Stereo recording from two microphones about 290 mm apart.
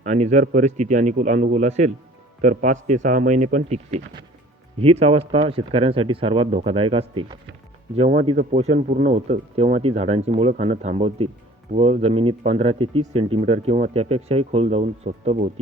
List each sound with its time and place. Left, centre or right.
0.0 s speech: right